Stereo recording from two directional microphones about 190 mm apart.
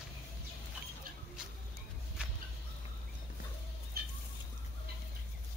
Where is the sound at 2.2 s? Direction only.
5° right (ahead or behind).